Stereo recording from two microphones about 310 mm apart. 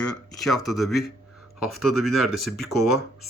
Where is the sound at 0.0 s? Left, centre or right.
Centre.